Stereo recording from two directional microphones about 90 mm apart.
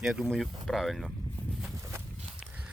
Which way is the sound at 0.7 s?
Centre (ahead or behind).